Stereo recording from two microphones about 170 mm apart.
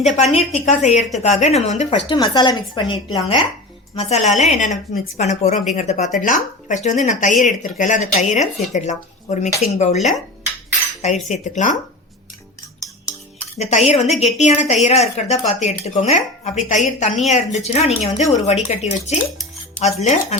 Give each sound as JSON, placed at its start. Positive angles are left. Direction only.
{"t": 0.0, "sound": "speech", "side_deg": 40}
{"t": 2.0, "sound": "a woman's voice", "side_deg": 25}
{"t": 3.9, "sound": "a woman's voice", "side_deg": 40}
{"t": 11.0, "sound": "speech", "side_deg": 45}
{"t": 13.6, "sound": "a woman's voice", "side_deg": 40}